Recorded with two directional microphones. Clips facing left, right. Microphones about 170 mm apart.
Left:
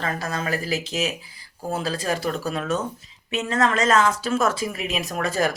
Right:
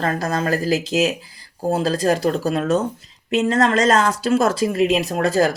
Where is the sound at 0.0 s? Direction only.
40° right (ahead or behind).